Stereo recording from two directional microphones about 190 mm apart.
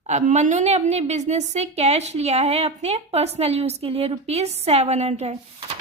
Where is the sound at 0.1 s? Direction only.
35° right (ahead or behind).